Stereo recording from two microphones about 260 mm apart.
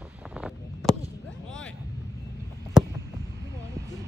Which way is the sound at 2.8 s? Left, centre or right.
Centre.